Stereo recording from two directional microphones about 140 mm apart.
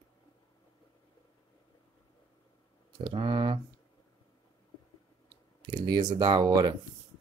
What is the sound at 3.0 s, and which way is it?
Speech, 35° right (ahead or behind).